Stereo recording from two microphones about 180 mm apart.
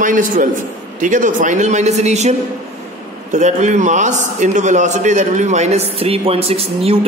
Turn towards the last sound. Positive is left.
turn(degrees=-35)  # may be behind; listen again after turning